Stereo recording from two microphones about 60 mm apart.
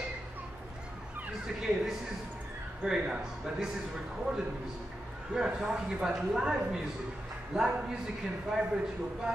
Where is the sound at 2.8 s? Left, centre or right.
Centre.